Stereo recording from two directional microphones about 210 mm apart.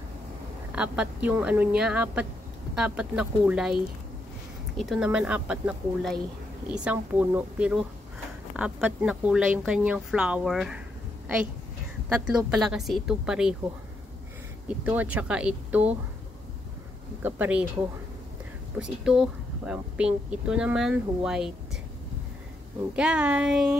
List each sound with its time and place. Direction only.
0.7 s speech: 5° right (ahead or behind)
12.1 s speech: 5° right (ahead or behind)
14.7 s speech: 5° right (ahead or behind)
17.2 s speech: 5° right (ahead or behind)
18.8 s speech: 5° right (ahead or behind)
22.9 s speech: 5° right (ahead or behind)